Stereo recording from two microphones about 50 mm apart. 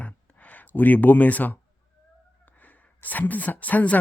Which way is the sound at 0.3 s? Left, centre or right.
Left.